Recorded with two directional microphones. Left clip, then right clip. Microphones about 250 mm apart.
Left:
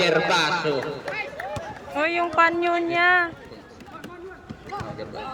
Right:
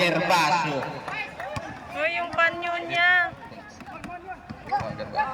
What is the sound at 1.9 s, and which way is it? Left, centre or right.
A man's voice, centre.